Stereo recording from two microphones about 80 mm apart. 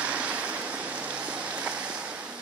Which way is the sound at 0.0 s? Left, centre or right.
Centre.